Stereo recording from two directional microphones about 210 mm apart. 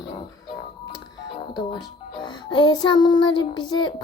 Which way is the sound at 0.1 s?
25° left (ahead or behind).